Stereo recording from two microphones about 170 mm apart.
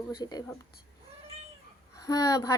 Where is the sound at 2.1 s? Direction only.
20° left (ahead or behind).